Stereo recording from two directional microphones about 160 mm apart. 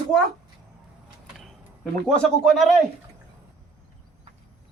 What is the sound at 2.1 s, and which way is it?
Speech, 5° left (ahead or behind).